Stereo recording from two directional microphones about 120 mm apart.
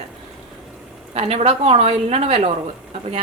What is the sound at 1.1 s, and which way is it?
A woman's voice, 55° right (ahead or behind).